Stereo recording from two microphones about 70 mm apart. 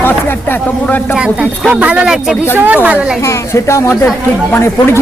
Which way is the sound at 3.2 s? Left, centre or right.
Left.